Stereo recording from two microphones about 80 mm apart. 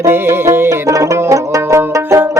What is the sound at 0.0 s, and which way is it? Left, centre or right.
Music, right.